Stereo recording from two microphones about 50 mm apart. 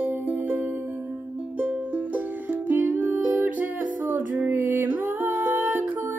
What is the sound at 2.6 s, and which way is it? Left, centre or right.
Music, right.